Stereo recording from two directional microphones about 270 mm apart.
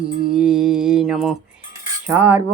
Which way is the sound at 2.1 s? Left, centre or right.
Centre.